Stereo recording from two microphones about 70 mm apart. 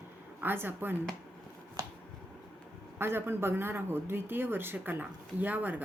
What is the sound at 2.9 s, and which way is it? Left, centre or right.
A woman's voice, right.